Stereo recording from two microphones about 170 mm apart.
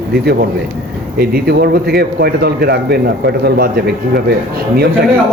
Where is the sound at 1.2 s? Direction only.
65° right (ahead or behind).